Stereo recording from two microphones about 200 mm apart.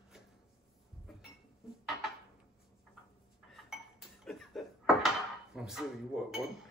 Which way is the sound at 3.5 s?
Centre (ahead or behind).